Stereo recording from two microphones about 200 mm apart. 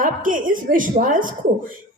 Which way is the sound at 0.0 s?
40° right (ahead or behind).